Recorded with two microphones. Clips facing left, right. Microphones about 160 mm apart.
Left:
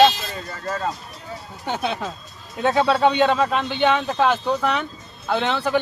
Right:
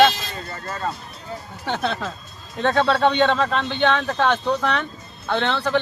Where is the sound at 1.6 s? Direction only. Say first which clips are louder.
Even; 10° left (ahead or behind).